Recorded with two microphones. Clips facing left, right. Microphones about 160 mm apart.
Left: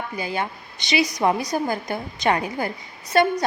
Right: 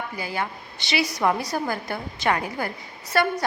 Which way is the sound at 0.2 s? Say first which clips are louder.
Left 3 dB; 20° left (ahead or behind).